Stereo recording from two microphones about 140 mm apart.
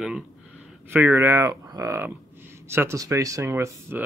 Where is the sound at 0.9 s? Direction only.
15° right (ahead or behind).